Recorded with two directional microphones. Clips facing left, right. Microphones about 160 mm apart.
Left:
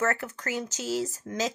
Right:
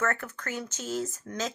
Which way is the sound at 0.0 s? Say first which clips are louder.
Left 2 dB; 40° left (ahead or behind).